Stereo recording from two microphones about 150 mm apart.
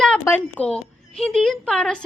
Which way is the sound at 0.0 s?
5° left (ahead or behind).